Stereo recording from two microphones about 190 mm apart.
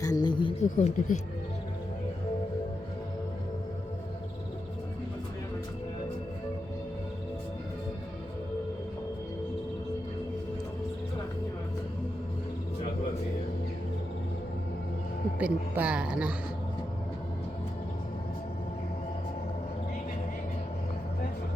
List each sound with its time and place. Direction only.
0.0 s a sound: 20° left (ahead or behind)
0.6 s speech: 40° left (ahead or behind)
15.4 s speech: 10° right (ahead or behind)